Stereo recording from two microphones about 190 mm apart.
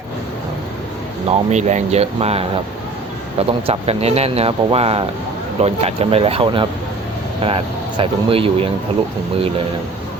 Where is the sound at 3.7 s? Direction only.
35° right (ahead or behind).